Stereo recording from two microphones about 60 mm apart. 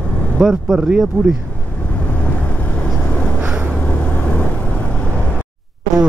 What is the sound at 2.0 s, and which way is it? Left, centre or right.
Vehicle, left.